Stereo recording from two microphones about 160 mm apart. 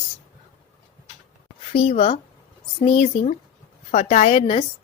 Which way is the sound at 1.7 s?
40° left (ahead or behind).